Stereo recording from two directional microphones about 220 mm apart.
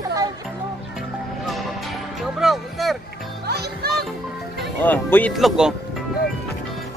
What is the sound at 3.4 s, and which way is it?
Music, 45° right (ahead or behind).